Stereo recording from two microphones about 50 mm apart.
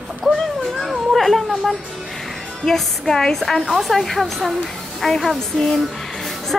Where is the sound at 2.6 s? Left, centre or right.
Centre.